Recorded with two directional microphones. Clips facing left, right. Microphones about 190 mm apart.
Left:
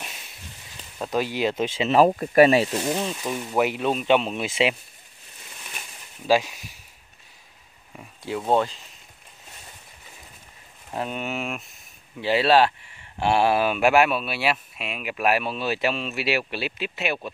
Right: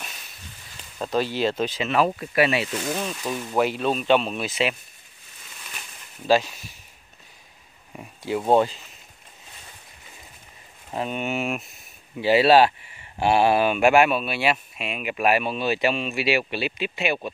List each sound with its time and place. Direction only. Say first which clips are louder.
0.9 s speech: right 1 dB; 10° left (ahead or behind)
1.9 s speech: left 6 dB; 35° left (ahead or behind)
2.8 s speech: left 2 dB; 20° left (ahead or behind)
6.2 s speech: right 1 dB; 10° left (ahead or behind)
8.2 s speech: right 3 dB; 5° right (ahead or behind)
10.9 s speech: right 2 dB; centre (ahead or behind)